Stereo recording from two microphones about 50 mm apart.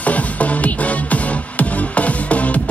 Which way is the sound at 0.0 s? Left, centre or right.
Left.